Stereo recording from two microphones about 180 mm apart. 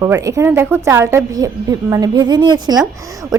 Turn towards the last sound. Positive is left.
turn(degrees=-20)  # may be behind; listen again after turning